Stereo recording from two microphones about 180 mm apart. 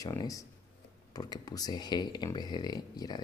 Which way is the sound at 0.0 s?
20° left (ahead or behind).